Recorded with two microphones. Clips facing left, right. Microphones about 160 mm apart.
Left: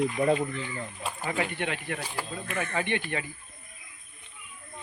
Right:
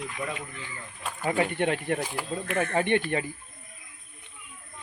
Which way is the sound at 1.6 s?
45° right (ahead or behind).